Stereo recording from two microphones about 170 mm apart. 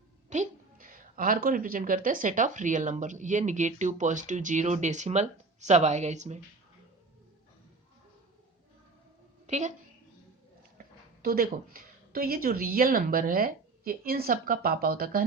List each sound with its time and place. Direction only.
0.3 s a woman's voice: 50° right (ahead or behind)
9.5 s a woman's voice: 45° right (ahead or behind)
10.8 s a woman's voice: 60° right (ahead or behind)